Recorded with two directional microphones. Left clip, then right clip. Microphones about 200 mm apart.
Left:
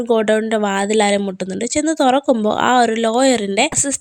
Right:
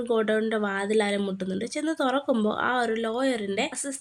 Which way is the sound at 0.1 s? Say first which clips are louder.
Left 9 dB; 30° left (ahead or behind).